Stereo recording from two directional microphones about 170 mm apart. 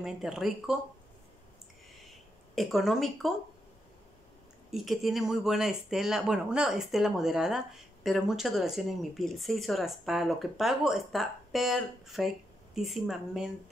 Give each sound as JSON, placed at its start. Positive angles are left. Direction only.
{"t": 0.0, "sound": "speech", "side_deg": 0}
{"t": 2.5, "sound": "speech", "side_deg": 0}
{"t": 4.6, "sound": "speech", "side_deg": 0}